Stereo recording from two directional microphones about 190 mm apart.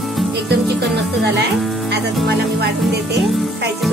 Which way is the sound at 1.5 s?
Centre (ahead or behind).